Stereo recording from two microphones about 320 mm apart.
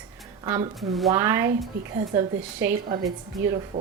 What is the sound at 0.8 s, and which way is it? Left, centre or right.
Speech, centre.